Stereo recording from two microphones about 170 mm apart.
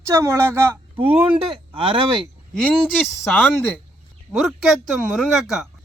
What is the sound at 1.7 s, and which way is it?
Speech, 30° right (ahead or behind).